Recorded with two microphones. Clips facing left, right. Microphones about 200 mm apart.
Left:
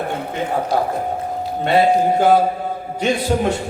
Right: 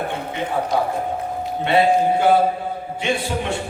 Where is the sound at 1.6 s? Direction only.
40° left (ahead or behind).